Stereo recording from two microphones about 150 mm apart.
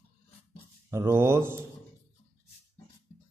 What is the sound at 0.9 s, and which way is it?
Speech, 20° right (ahead or behind).